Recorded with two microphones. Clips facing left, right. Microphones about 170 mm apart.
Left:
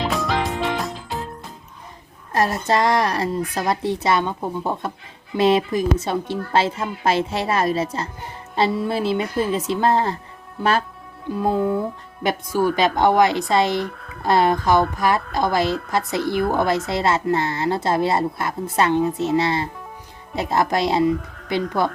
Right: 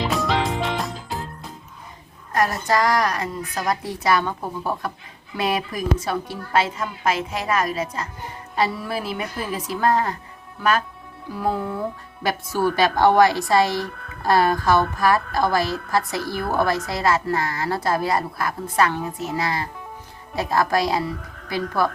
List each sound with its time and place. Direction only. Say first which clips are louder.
0.1 s music: even; centre (ahead or behind)
2.3 s speech: left 1 dB; 25° left (ahead or behind)